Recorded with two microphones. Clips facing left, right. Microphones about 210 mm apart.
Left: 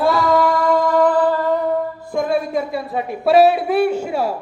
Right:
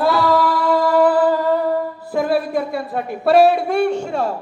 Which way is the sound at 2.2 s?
5° right (ahead or behind).